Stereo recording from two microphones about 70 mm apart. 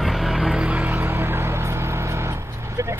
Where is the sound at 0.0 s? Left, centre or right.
Centre.